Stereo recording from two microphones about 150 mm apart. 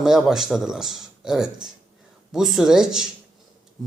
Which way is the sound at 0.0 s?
Centre (ahead or behind).